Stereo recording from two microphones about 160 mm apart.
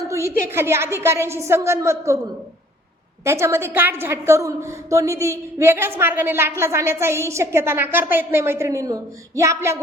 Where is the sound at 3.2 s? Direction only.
15° right (ahead or behind).